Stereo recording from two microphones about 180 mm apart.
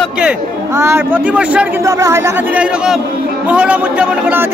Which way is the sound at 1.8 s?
15° right (ahead or behind).